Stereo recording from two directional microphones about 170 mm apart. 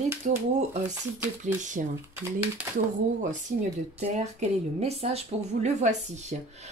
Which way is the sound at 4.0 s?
40° right (ahead or behind).